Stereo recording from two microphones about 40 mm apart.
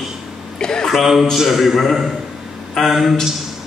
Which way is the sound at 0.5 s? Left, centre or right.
Centre.